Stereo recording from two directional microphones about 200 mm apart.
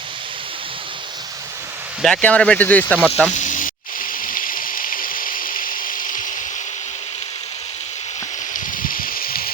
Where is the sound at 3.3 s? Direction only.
40° left (ahead or behind).